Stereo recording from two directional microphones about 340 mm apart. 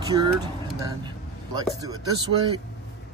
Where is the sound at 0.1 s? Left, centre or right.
Centre.